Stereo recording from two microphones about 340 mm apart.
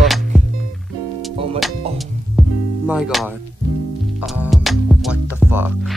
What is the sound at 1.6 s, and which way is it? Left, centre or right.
Music, centre.